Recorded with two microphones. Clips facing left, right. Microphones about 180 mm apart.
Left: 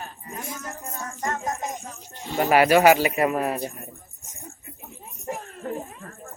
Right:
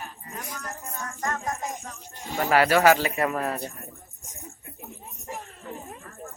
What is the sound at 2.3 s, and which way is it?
Speech, 15° left (ahead or behind).